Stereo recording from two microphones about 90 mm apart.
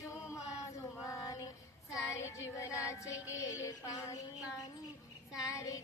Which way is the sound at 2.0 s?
35° left (ahead or behind).